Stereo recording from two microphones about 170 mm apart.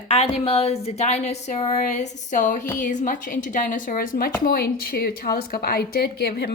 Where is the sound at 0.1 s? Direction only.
35° left (ahead or behind).